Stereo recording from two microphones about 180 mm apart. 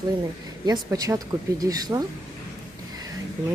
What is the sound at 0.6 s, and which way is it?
Speech, 20° right (ahead or behind).